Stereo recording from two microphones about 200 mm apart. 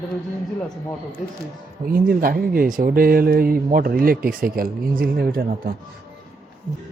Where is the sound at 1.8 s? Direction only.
45° right (ahead or behind).